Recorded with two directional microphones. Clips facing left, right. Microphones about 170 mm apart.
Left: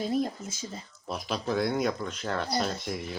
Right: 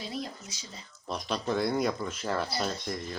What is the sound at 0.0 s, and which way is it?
Speech, 50° left (ahead or behind).